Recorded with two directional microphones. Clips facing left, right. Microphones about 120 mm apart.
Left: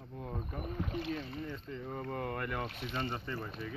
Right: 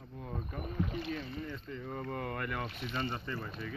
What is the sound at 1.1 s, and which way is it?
Boat, 30° left (ahead or behind).